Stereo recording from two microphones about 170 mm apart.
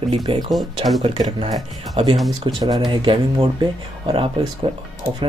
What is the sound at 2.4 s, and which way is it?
Speech, 25° right (ahead or behind).